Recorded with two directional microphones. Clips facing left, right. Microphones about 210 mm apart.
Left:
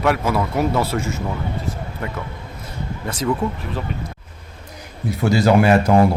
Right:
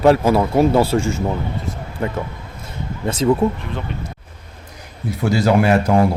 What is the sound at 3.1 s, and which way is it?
Speech, 25° right (ahead or behind).